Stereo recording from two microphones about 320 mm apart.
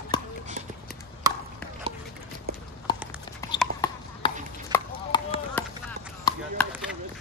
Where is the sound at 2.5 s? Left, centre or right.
Right.